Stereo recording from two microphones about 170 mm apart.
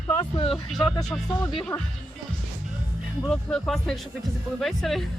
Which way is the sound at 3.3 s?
5° left (ahead or behind).